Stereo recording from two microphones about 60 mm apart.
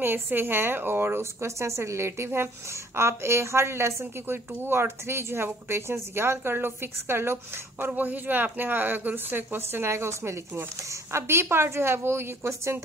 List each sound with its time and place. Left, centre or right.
0.0 s a woman's voice: right
7.9 s a woman's voice: right